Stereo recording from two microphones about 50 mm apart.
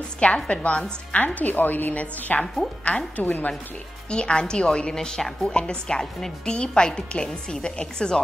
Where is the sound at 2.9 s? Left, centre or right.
Left.